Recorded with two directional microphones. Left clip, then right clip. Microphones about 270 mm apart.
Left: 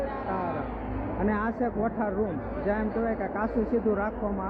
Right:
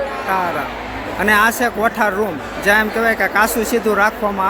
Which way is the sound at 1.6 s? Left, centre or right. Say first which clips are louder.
Right 13 dB; right.